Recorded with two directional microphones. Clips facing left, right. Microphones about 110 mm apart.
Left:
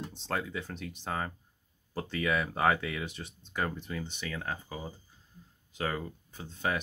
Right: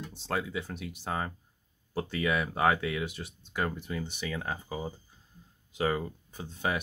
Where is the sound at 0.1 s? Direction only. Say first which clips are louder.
Right 4 dB; 5° right (ahead or behind).